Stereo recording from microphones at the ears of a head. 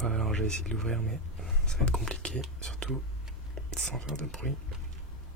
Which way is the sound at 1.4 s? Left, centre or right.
Centre.